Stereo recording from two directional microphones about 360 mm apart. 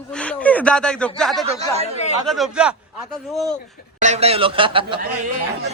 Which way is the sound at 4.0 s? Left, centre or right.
Centre.